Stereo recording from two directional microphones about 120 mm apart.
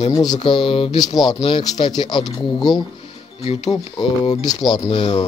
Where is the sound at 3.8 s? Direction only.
40° left (ahead or behind).